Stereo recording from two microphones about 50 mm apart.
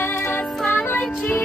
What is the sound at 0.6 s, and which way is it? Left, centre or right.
Music, left.